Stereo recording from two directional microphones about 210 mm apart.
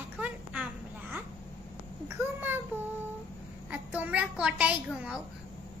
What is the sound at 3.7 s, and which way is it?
A child's voice, 5° right (ahead or behind).